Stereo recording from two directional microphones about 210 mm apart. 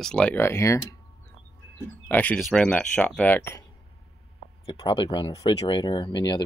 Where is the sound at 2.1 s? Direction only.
5° left (ahead or behind).